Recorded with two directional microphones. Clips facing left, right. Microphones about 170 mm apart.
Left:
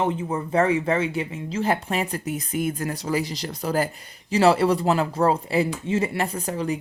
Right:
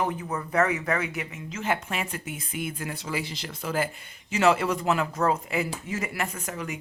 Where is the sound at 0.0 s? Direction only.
25° left (ahead or behind).